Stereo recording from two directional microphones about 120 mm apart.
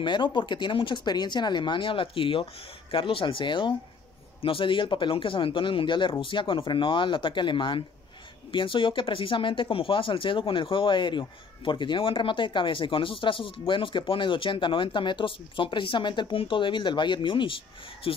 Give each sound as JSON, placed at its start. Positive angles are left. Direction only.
{"t": 0.0, "sound": "speech", "side_deg": 40}